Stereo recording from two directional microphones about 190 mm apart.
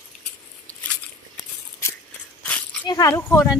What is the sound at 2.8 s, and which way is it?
Speech, 20° left (ahead or behind).